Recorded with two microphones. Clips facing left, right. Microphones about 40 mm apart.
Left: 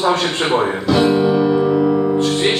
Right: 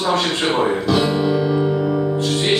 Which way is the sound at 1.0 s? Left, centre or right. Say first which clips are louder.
Left 4 dB; centre.